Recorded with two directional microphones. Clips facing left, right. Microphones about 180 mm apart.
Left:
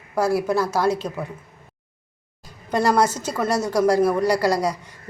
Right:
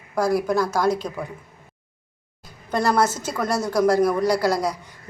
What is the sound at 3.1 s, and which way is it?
Speech, 10° right (ahead or behind).